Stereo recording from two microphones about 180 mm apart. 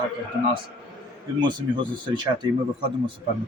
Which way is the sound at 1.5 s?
25° right (ahead or behind).